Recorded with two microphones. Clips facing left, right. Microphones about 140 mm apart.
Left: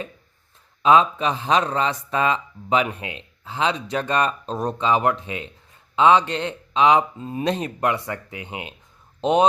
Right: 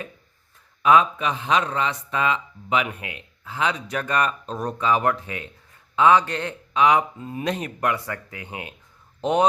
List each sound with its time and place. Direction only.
0.8 s speech: 25° left (ahead or behind)